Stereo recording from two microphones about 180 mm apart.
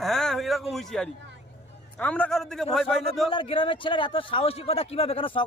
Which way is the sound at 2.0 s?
5° left (ahead or behind).